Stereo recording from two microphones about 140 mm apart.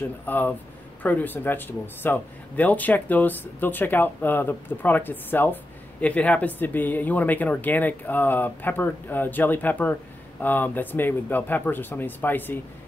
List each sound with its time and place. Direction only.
0.3 s speech: 15° left (ahead or behind)